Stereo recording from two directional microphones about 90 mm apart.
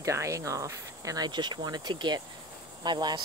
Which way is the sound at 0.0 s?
35° right (ahead or behind).